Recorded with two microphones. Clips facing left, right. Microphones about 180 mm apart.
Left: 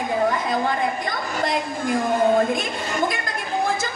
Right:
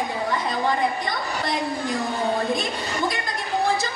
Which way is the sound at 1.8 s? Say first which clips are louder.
Left 10 dB; 50° left (ahead or behind).